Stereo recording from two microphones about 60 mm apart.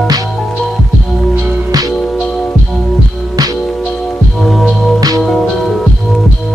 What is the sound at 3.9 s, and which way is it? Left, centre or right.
Music, centre.